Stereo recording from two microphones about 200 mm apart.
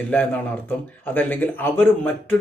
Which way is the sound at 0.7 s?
10° left (ahead or behind).